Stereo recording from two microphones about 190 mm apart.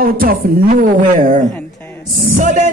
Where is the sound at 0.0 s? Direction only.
50° right (ahead or behind).